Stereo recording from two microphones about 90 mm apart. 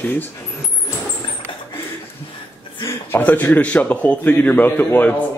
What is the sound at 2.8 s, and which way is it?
A man's voice, 20° left (ahead or behind).